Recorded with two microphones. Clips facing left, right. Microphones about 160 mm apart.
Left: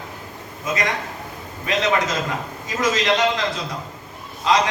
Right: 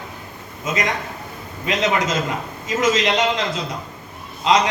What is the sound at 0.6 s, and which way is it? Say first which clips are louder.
A man's voice: right 1 dB; 20° right (ahead or behind).